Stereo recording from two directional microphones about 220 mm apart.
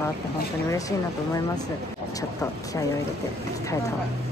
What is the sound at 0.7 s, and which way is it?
Speech, 15° left (ahead or behind).